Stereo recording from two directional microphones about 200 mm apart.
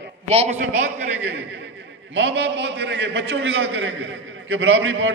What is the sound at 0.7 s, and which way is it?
A man's voice, 65° right (ahead or behind).